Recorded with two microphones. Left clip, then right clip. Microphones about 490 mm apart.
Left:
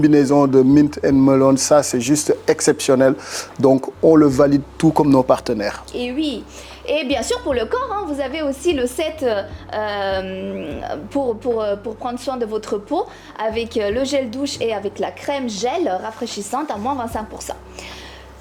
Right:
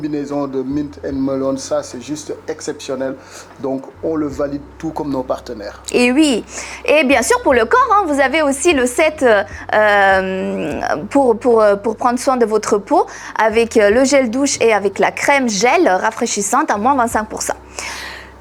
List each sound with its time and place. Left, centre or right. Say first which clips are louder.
0.0 s speech: left 7 dB; left
6.9 s a woman's voice: right 8 dB; right